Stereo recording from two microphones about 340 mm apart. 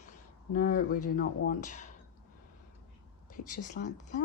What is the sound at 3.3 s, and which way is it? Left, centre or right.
Speech, left.